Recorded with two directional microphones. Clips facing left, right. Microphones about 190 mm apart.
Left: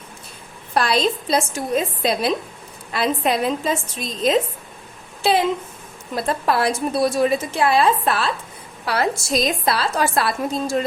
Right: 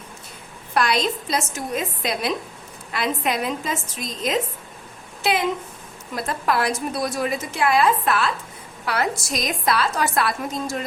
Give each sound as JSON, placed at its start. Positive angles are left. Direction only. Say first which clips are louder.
{"t": 0.7, "sound": "a woman's voice", "louder": "left 2 dB", "side_deg": 30}